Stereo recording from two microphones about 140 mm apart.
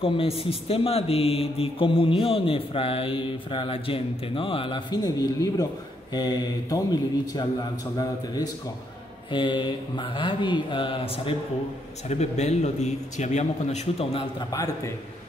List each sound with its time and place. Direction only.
0.0 s speech: 45° left (ahead or behind)
9.3 s speech: 35° left (ahead or behind)
12.1 s a man's voice: 50° left (ahead or behind)
14.5 s speech: 25° left (ahead or behind)